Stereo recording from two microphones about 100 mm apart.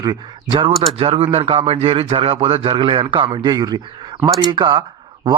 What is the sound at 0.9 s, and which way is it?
A man's voice, 70° right (ahead or behind).